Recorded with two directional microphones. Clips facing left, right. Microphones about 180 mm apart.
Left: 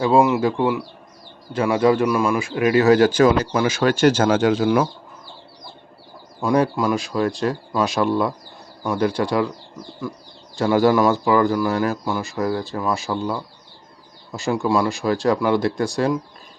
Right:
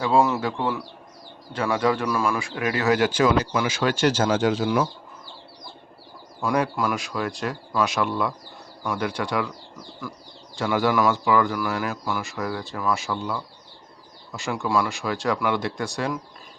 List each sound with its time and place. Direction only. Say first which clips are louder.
0.2 s speech: left 2 dB; 15° left (ahead or behind)
1.5 s speech: left 6 dB; 25° left (ahead or behind); by 4.9 s 60° left (ahead or behind)
6.4 s speech: left 5 dB; 25° left (ahead or behind)
10.5 s speech: left 6 dB; 35° left (ahead or behind)